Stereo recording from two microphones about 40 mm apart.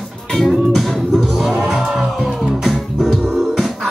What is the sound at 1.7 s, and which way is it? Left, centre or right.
Music, right.